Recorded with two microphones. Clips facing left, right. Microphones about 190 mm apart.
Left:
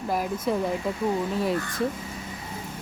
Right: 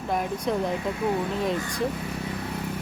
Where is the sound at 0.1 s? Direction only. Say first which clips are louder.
Even; 5° left (ahead or behind).